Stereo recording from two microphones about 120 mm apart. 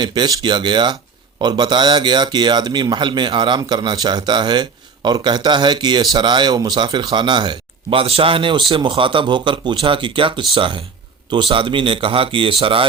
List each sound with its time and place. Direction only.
0.0 s speech: 40° right (ahead or behind)